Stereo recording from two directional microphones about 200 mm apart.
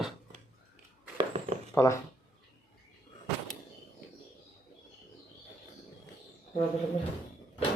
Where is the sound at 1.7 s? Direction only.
15° left (ahead or behind).